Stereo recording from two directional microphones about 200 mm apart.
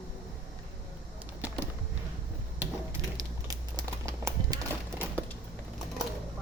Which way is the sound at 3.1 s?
15° right (ahead or behind).